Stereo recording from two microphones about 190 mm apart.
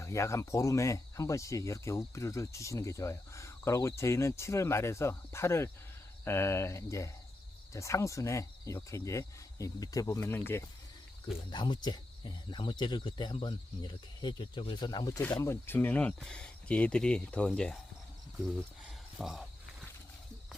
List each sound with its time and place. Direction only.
0.0 s speech: 15° left (ahead or behind)
11.5 s speech: 25° left (ahead or behind); by 17.7 s 5° left (ahead or behind)
19.2 s a sound: centre (ahead or behind)